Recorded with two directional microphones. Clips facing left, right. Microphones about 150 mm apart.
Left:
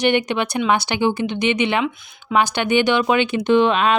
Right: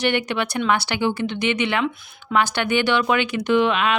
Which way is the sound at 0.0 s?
20° left (ahead or behind).